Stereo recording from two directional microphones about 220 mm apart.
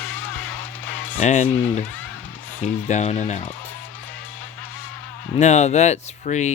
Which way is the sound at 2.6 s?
30° left (ahead or behind).